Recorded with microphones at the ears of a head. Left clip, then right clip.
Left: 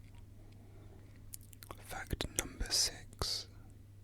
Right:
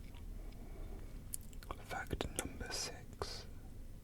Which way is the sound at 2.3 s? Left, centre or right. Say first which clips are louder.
Left 8 dB; left.